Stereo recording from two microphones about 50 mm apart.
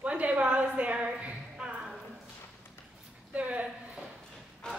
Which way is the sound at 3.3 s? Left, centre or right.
Right.